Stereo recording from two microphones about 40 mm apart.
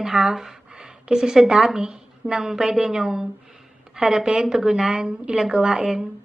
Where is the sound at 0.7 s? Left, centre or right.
Right.